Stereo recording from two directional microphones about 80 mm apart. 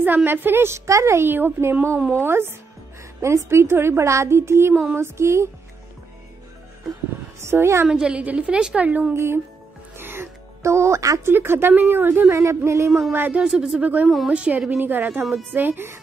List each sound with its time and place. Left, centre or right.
0.0 s a woman's voice: right
7.3 s a woman's voice: right
7.9 s a woman's voice: centre
9.1 s a woman's voice: right
9.9 s music: right
11.2 s a woman's voice: right
13.4 s a woman's voice: centre
13.7 s a woman's voice: centre
14.0 s a woman's voice: centre
14.3 s a woman's voice: centre